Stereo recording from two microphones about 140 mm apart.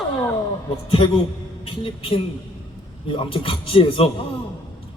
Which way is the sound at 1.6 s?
40° left (ahead or behind).